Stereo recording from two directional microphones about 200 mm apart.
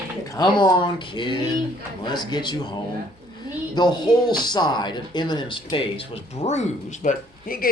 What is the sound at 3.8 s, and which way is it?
Speech, 20° left (ahead or behind).